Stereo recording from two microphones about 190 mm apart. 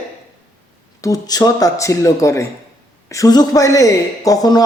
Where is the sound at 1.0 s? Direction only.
20° left (ahead or behind).